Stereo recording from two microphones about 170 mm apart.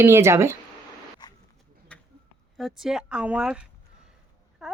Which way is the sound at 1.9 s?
5° left (ahead or behind).